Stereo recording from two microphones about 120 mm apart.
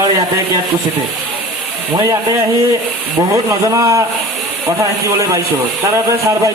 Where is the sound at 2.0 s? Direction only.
35° right (ahead or behind).